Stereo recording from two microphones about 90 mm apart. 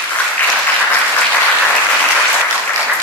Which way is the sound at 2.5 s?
10° left (ahead or behind).